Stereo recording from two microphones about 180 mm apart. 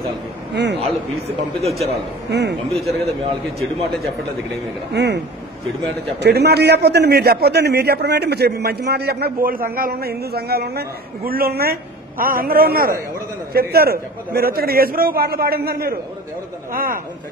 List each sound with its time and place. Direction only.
0.7 s a man's voice: 35° right (ahead or behind)
2.3 s speech: 70° right (ahead or behind)
2.7 s speech: centre (ahead or behind)
4.9 s speech: 70° right (ahead or behind)
6.2 s a man's voice: 65° right (ahead or behind)